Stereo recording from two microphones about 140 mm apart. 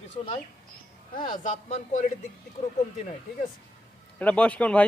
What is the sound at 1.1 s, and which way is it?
Speech, 35° left (ahead or behind).